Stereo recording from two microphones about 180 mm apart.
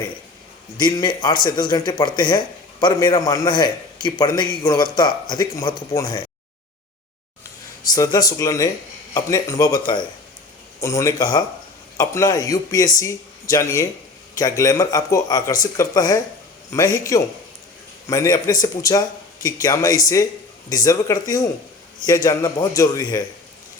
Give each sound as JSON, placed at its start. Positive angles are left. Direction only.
{"t": 0.8, "sound": "a man's voice", "side_deg": 20}
{"t": 7.9, "sound": "a man's voice", "side_deg": 20}